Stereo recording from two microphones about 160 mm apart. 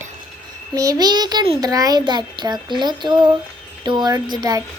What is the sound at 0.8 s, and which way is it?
A child's voice, 25° right (ahead or behind).